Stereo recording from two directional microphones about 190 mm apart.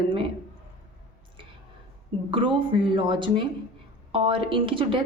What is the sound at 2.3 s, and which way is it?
Speech, 25° right (ahead or behind).